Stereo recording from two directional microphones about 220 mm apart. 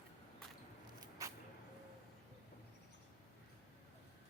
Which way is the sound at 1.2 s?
15° right (ahead or behind).